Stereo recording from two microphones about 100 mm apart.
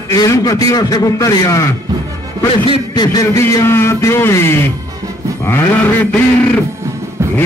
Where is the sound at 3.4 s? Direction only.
25° left (ahead or behind).